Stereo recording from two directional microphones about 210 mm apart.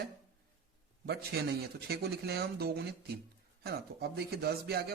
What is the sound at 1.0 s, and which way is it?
Speech, 50° right (ahead or behind).